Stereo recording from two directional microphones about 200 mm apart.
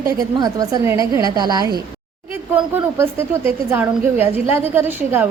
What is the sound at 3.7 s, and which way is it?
A woman's voice, 10° right (ahead or behind).